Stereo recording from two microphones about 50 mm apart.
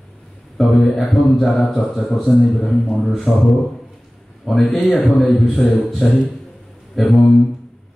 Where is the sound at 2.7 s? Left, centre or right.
Centre.